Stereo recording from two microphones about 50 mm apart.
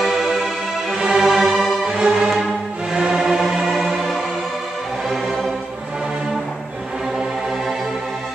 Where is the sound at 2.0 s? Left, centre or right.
Centre.